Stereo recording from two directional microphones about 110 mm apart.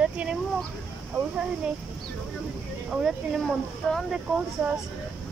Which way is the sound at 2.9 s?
5° right (ahead or behind).